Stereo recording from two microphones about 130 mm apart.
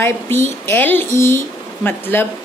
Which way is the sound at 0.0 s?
20° left (ahead or behind).